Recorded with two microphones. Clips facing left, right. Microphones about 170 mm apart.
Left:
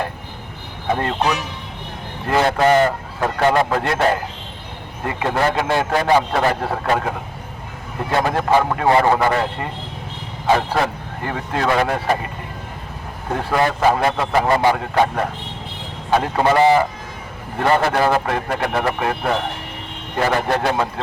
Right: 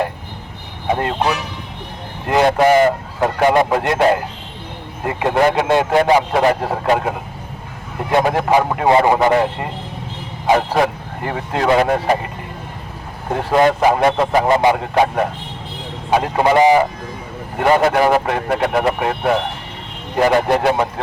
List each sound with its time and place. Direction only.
0.9 s a man's voice: 20° right (ahead or behind)
5.0 s a man's voice: 20° right (ahead or behind)
8.1 s a man's voice: 15° right (ahead or behind)
13.3 s a man's voice: 20° right (ahead or behind)